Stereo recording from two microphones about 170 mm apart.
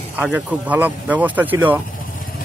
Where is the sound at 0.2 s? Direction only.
10° right (ahead or behind).